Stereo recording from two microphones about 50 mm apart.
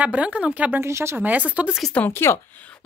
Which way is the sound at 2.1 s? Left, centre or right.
Left.